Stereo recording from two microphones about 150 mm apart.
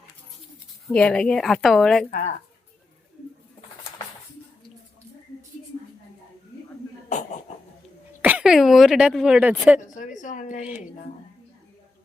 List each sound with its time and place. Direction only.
0.9 s a woman's voice: 5° left (ahead or behind)
2.0 s a sound: 65° left (ahead or behind)
8.2 s a woman's voice: 10° right (ahead or behind)
9.8 s a woman's voice: 55° left (ahead or behind)
10.6 s a woman's voice: 10° right (ahead or behind)